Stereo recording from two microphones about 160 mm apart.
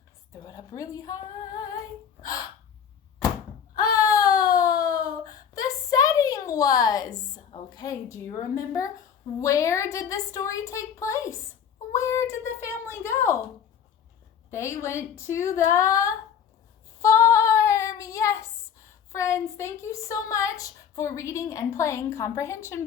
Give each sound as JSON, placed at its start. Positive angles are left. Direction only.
{"t": 0.3, "sound": "a woman's voice", "side_deg": 20}
{"t": 3.8, "sound": "baby cry", "side_deg": 20}
{"t": 7.7, "sound": "a woman's voice", "side_deg": 25}
{"t": 11.9, "sound": "a sound", "side_deg": 20}
{"t": 14.5, "sound": "a woman's voice", "side_deg": 15}
{"t": 17.0, "sound": "female singing", "side_deg": 20}